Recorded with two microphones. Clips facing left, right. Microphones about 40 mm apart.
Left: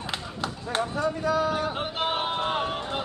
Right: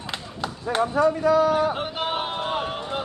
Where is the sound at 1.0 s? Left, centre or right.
Right.